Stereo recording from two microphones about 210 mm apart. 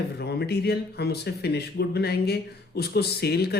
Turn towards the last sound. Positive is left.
turn(degrees=50)  # may be behind; listen again after turning